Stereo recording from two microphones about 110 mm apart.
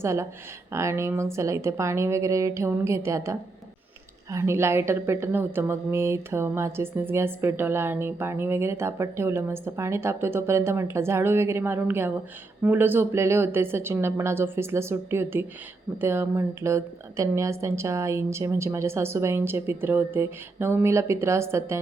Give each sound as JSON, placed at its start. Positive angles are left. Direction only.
{"t": 0.0, "sound": "a woman's voice", "side_deg": -25}